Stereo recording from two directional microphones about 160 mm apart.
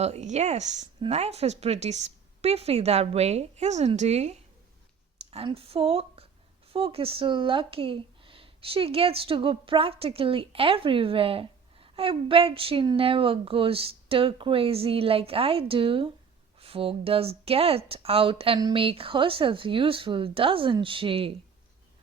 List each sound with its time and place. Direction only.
0.0 s speech: 45° right (ahead or behind)